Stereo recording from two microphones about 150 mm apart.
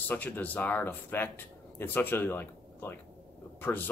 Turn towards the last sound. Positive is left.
turn(degrees=15)  # may be behind; listen again after turning